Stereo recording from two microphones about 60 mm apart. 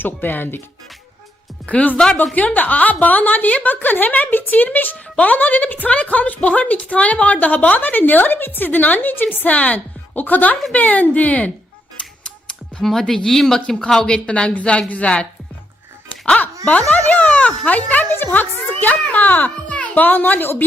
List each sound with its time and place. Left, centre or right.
0.0 s a woman's voice: left
1.6 s a woman's voice: left
12.8 s speech: centre; by 16.5 s left
16.9 s a sound: left
17.7 s a woman's voice: left